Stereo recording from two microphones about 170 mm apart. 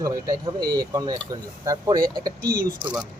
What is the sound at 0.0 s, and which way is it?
Speech, 20° right (ahead or behind).